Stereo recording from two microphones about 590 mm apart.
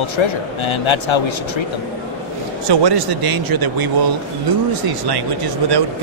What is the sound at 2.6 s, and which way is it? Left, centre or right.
Speech, right.